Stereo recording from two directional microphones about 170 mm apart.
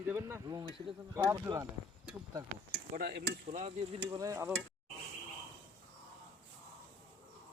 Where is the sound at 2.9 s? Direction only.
55° right (ahead or behind).